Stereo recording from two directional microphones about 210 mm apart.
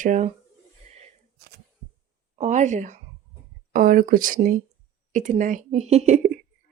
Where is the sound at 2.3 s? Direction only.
35° right (ahead or behind).